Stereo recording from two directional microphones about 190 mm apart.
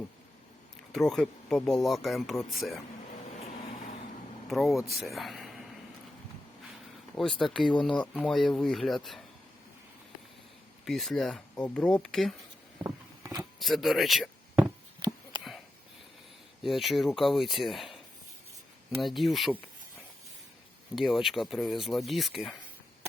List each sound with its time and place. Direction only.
0.9 s speech: centre (ahead or behind)
4.4 s speech: centre (ahead or behind)
5.1 s a sound: centre (ahead or behind)
7.2 s speech: centre (ahead or behind)
10.8 s speech: centre (ahead or behind)
12.8 s a sound: 15° right (ahead or behind)
13.6 s speech: centre (ahead or behind)
16.6 s speech: centre (ahead or behind)
20.9 s speech: centre (ahead or behind)